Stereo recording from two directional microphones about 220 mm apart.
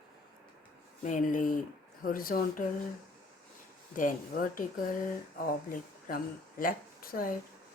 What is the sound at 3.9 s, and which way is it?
Speech, 40° left (ahead or behind).